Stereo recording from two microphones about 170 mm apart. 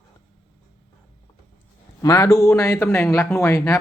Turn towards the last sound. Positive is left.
turn(degrees=20)  # may be behind; listen again after turning